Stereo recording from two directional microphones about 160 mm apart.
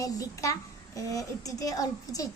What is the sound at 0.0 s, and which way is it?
A child's voice, 20° left (ahead or behind).